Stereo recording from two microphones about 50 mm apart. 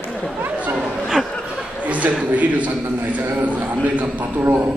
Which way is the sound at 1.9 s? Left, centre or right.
Right.